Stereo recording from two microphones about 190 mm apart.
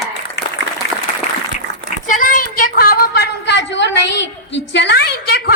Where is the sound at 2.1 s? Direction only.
45° left (ahead or behind).